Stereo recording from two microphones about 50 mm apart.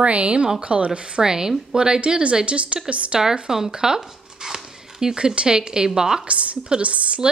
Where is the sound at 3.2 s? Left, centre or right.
Centre.